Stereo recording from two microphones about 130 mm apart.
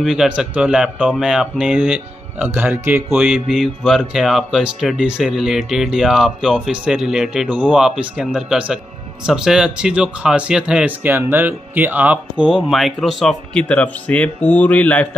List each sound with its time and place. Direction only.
0.0 s speech: 5° right (ahead or behind)